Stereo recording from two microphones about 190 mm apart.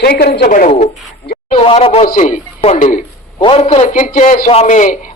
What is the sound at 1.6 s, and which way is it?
Speech, 30° left (ahead or behind).